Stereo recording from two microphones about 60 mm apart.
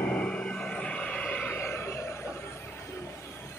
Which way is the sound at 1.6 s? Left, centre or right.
Left.